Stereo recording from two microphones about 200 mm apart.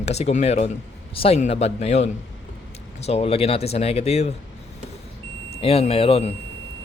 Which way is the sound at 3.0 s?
30° left (ahead or behind).